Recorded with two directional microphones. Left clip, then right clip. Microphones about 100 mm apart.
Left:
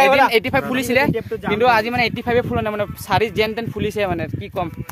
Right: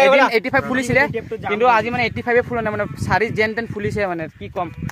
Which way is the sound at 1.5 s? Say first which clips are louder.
Even; 25° left (ahead or behind).